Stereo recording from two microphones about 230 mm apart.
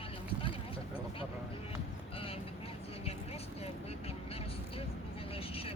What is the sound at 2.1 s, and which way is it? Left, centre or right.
Vehicle, left.